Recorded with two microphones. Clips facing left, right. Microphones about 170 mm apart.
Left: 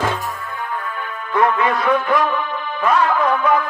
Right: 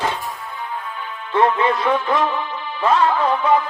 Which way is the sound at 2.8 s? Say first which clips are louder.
Even; 25° right (ahead or behind).